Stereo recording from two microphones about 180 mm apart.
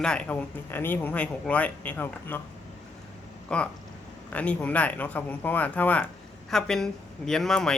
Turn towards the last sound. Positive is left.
turn(degrees=0)  # may be behind; listen again after turning